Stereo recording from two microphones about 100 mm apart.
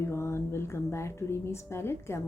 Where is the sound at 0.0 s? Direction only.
25° left (ahead or behind).